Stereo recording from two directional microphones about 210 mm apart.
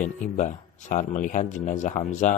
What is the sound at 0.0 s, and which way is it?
Speech, 35° left (ahead or behind).